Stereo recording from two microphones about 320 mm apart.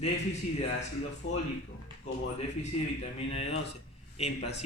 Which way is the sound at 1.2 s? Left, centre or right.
Left.